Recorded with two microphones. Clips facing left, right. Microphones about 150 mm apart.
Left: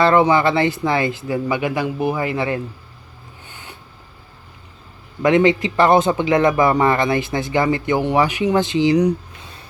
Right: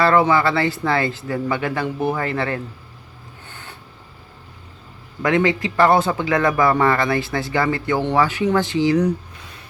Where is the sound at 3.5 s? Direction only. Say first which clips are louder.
Even; 15° left (ahead or behind).